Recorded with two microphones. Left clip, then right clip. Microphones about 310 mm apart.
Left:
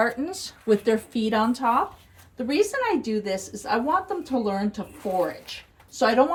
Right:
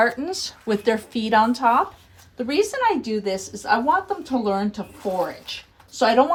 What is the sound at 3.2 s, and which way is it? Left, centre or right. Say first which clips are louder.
A woman's voice: right 5 dB; centre.